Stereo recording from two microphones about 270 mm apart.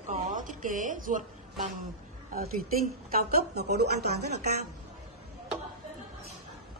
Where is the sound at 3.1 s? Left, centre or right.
Right.